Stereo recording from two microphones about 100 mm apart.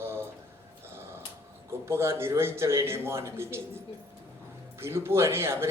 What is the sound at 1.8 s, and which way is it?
A man's voice, 25° right (ahead or behind).